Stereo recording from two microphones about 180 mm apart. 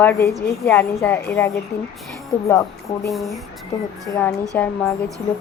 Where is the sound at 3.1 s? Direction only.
Centre (ahead or behind).